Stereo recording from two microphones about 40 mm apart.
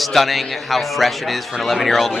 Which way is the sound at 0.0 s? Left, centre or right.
Centre.